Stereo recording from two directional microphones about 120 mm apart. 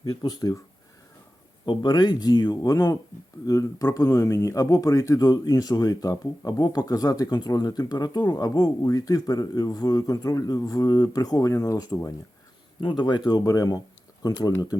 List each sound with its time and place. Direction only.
0.0 s speech: 35° left (ahead or behind)
1.6 s speech: 40° left (ahead or behind)